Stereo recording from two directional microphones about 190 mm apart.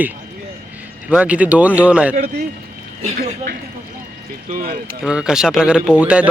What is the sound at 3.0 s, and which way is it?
Speech, 45° right (ahead or behind).